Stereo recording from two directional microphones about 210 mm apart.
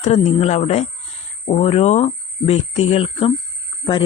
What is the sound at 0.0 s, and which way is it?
Speech, 30° left (ahead or behind).